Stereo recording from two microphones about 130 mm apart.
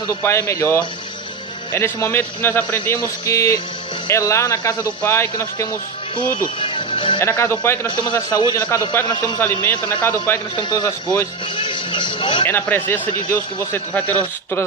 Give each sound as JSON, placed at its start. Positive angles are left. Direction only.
{"t": 0.1, "sound": "a man's voice", "side_deg": 20}
{"t": 6.6, "sound": "music", "side_deg": 40}
{"t": 7.2, "sound": "speech", "side_deg": 20}
{"t": 7.9, "sound": "a man's voice", "side_deg": 30}
{"t": 10.6, "sound": "speech", "side_deg": 30}
{"t": 11.5, "sound": "music", "side_deg": 40}
{"t": 12.5, "sound": "a man's voice", "side_deg": 15}